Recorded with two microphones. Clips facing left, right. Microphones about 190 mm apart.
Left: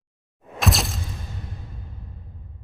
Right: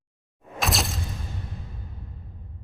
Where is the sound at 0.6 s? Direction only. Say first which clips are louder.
Left 3 dB; centre (ahead or behind).